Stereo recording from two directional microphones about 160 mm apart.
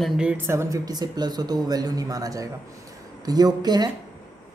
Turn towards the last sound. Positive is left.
turn(degrees=-25)  # may be behind; listen again after turning